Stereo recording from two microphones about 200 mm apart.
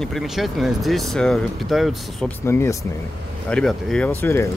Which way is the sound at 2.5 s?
15° left (ahead or behind).